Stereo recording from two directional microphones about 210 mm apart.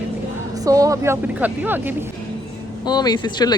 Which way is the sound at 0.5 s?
15° right (ahead or behind).